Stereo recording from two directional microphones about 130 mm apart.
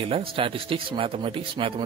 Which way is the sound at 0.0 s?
45° right (ahead or behind).